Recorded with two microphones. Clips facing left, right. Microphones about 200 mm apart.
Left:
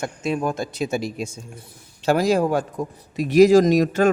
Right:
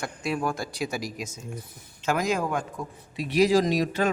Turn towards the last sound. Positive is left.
turn(degrees=45)  # may be behind; listen again after turning